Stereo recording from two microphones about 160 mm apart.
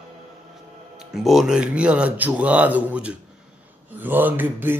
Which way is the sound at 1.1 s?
Centre (ahead or behind).